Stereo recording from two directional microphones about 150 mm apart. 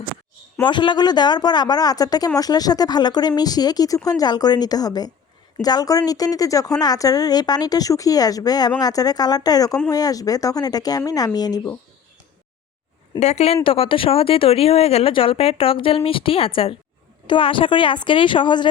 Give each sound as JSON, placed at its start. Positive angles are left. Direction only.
{"t": 0.6, "sound": "speech", "side_deg": 30}
{"t": 13.1, "sound": "speech", "side_deg": 45}